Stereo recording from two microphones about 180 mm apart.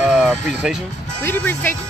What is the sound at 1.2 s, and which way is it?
Speech, 10° left (ahead or behind).